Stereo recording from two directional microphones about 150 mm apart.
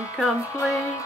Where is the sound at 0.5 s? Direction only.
20° left (ahead or behind).